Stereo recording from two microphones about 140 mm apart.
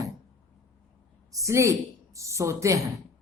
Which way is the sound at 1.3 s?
20° right (ahead or behind).